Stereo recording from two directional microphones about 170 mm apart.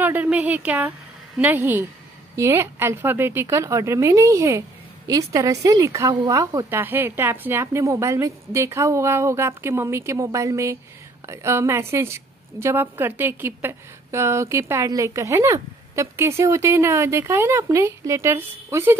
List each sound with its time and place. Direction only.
0.0 s a woman's voice: 10° right (ahead or behind)